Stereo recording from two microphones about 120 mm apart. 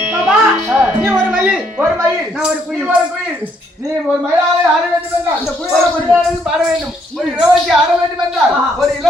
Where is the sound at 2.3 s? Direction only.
5° right (ahead or behind).